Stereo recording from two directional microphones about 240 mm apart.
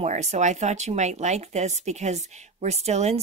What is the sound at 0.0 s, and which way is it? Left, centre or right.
Speech, right.